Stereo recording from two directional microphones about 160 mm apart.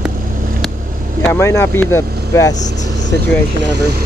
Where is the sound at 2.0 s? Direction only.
75° right (ahead or behind).